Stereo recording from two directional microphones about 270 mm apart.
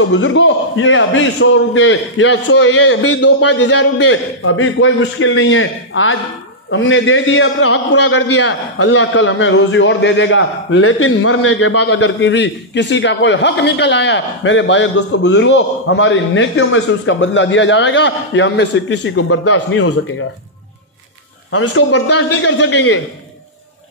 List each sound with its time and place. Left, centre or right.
0.1 s a man's voice: left
8.5 s a man's voice: left
8.9 s a man's voice: left
12.0 s a man's voice: left
21.5 s a man's voice: left